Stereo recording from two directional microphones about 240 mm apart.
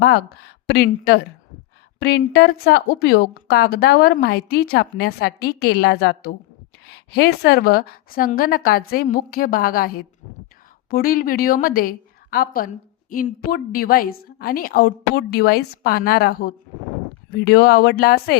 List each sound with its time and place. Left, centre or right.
0.0 s a woman's voice: left